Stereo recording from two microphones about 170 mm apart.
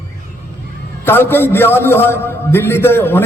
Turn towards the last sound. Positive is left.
turn(degrees=15)  # may be behind; listen again after turning